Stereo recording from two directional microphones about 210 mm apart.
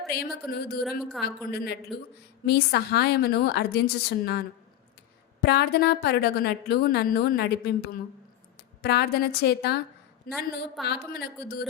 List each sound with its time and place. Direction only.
0.2 s a woman's voice: 50° left (ahead or behind)
8.8 s a woman's voice: 50° left (ahead or behind)
10.2 s a woman's voice: centre (ahead or behind)
10.8 s a woman's voice: 50° left (ahead or behind)